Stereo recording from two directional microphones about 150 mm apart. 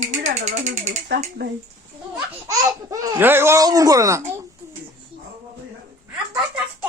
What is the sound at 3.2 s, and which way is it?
Speech, 15° right (ahead or behind).